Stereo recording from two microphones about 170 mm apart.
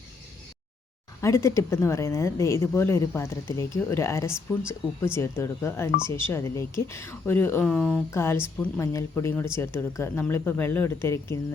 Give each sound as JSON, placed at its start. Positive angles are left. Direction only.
{"t": 1.2, "sound": "speech", "side_deg": 20}